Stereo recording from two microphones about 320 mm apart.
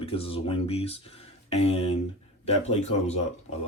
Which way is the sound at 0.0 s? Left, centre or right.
Centre.